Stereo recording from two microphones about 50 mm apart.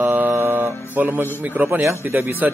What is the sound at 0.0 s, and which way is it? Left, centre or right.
Mantra, right.